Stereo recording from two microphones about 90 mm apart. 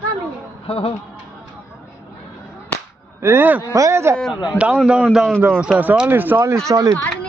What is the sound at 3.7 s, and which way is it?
Speech, 35° right (ahead or behind).